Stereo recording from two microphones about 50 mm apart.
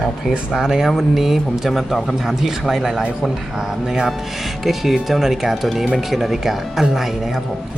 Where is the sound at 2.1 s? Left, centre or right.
Centre.